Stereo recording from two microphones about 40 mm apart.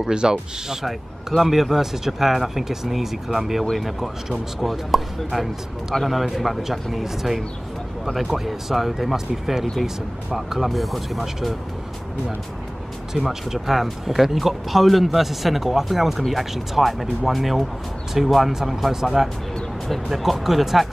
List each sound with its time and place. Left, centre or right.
0.0 s speech: centre
0.8 s speech: centre
13.1 s speech: centre